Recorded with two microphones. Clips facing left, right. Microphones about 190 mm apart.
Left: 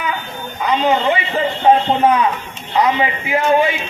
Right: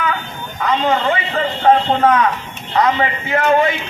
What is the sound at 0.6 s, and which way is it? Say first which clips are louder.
A man's voice: left 1 dB; 15° left (ahead or behind).